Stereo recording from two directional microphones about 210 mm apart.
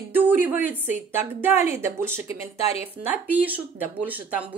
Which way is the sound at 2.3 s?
30° left (ahead or behind).